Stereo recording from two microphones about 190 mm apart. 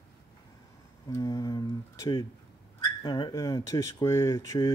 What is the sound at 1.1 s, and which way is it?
Speech, 20° left (ahead or behind).